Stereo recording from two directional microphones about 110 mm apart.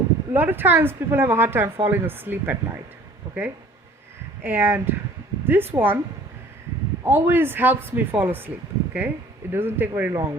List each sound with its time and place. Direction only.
0.3 s a woman's voice: 20° right (ahead or behind)
7.0 s a woman's voice: 20° right (ahead or behind)